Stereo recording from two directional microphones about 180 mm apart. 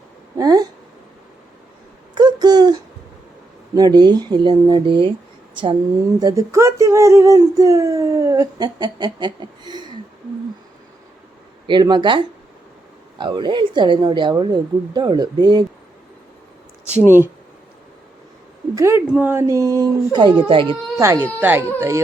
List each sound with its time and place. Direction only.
0.3 s speech: 20° right (ahead or behind)
2.1 s a sound: 20° right (ahead or behind)
3.8 s speech: 20° right (ahead or behind)
6.1 s speech: 20° right (ahead or behind)
11.6 s speech: 25° right (ahead or behind)
16.9 s speech: 10° right (ahead or behind)
18.7 s speech: 15° right (ahead or behind)
21.0 s speech: 15° right (ahead or behind)